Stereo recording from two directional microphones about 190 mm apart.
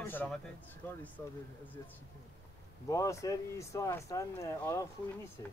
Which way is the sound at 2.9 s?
15° left (ahead or behind).